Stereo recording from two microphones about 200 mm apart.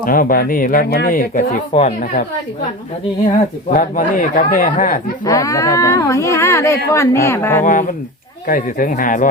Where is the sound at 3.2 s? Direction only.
45° left (ahead or behind).